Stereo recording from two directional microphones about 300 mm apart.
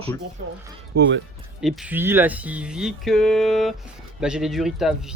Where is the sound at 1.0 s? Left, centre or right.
Right.